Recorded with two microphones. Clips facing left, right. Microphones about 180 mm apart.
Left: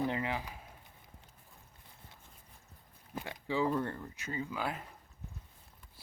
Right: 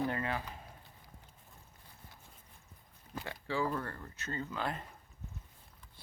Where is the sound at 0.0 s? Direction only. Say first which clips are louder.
Left 1 dB; 15° left (ahead or behind).